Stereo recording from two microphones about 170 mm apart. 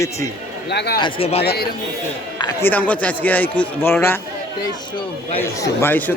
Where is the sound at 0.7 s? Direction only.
75° left (ahead or behind).